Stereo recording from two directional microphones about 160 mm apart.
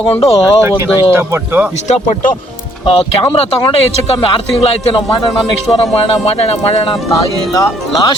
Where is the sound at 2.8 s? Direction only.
30° left (ahead or behind).